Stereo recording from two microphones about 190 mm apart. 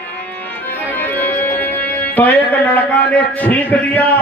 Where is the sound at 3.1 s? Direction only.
10° left (ahead or behind).